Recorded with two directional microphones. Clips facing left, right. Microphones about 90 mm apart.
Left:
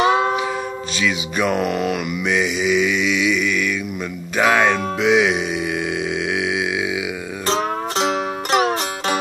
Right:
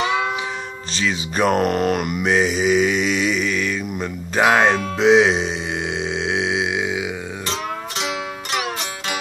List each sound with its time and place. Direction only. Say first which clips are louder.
0.0 s music: left 5 dB; 35° left (ahead or behind)
0.9 s mantra: even; 35° right (ahead or behind)
4.4 s speech: right 1 dB; 20° right (ahead or behind)
4.6 s mantra: right 2 dB; 30° right (ahead or behind)
6.2 s a sound: even; 25° right (ahead or behind)
7.4 s music: left 8 dB; 40° left (ahead or behind)